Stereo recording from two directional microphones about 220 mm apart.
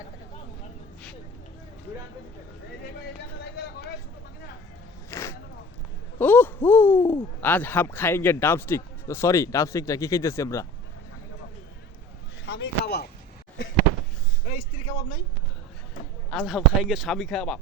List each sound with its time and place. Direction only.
3.4 s vehicle: 45° left (ahead or behind)
5.1 s a sound: 15° left (ahead or behind)
6.1 s a man's voice: 10° left (ahead or behind)
12.5 s speech: 50° left (ahead or behind)
14.4 s speech: 30° left (ahead or behind)
16.3 s speech: centre (ahead or behind)